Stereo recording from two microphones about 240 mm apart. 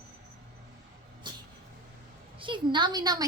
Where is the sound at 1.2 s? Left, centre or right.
Centre.